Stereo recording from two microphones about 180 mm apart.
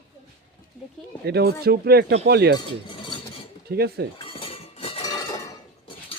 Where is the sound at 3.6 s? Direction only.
65° right (ahead or behind).